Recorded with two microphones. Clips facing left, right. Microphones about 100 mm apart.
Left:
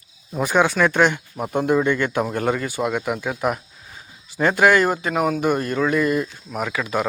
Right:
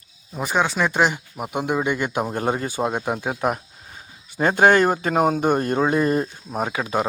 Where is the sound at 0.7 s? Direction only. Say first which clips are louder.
Left 3 dB; 10° right (ahead or behind).